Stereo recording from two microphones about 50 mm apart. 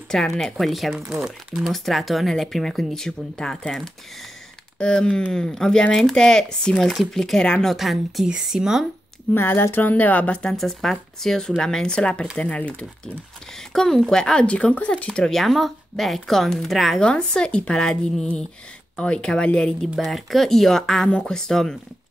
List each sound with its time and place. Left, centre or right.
0.1 s speech: centre
6.8 s speech: centre
7.6 s speech: centre
9.3 s speech: left
10.5 s speech: centre; by 12.8 s left
13.7 s speech: centre
14.4 s speech: left
15.2 s speech: centre
17.0 s speech: centre
20.0 s speech: centre